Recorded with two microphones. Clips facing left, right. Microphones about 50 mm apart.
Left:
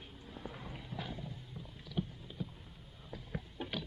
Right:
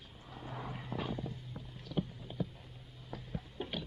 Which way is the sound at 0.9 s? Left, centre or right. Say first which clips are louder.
Right 5 dB; right.